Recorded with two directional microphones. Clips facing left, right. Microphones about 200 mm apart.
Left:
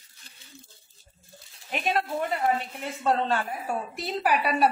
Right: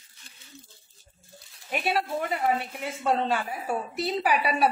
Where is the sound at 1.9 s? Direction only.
10° right (ahead or behind).